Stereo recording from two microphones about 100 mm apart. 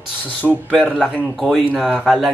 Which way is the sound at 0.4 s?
Centre (ahead or behind).